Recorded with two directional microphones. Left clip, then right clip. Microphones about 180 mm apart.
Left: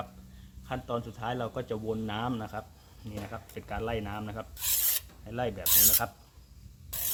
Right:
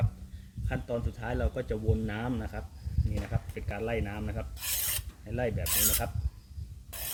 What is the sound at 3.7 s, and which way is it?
Speech, 25° left (ahead or behind).